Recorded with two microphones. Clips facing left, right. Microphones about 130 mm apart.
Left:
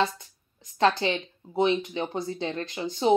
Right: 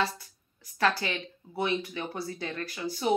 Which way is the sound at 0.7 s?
25° left (ahead or behind).